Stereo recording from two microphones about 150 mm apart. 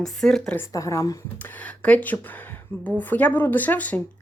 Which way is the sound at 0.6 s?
20° left (ahead or behind).